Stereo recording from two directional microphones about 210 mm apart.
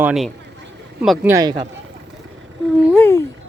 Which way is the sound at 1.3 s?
20° right (ahead or behind).